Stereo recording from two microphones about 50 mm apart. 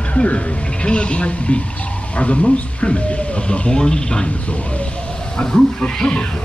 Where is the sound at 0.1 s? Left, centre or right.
Left.